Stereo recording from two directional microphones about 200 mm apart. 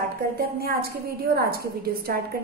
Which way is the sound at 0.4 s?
50° right (ahead or behind).